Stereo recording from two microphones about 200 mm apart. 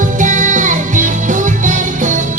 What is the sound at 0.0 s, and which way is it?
Music, 40° right (ahead or behind).